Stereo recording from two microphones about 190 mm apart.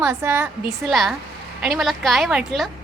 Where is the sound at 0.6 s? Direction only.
Centre (ahead or behind).